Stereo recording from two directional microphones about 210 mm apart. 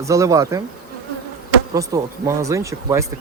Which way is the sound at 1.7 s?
15° right (ahead or behind).